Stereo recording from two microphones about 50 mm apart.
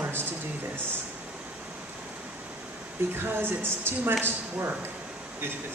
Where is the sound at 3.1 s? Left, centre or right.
Right.